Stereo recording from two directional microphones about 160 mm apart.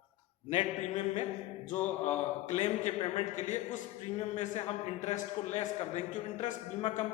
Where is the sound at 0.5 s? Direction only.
45° left (ahead or behind).